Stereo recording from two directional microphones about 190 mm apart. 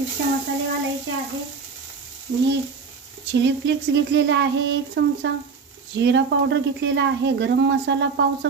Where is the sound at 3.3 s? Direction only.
70° right (ahead or behind).